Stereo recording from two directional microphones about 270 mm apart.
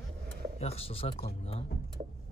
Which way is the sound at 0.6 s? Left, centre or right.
Left.